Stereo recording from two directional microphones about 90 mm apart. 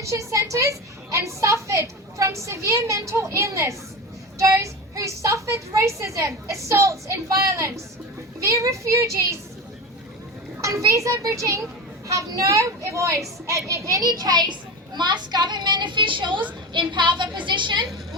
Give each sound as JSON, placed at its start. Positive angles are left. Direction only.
{"t": 0.0, "sound": "a woman's voice", "side_deg": -35}
{"t": 10.6, "sound": "a woman's voice", "side_deg": -35}
{"t": 14.0, "sound": "a child's voice", "side_deg": -50}